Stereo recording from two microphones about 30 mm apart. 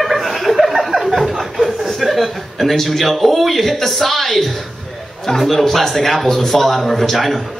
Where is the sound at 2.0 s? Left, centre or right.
Centre.